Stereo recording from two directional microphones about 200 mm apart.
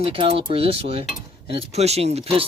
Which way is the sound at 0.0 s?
30° right (ahead or behind).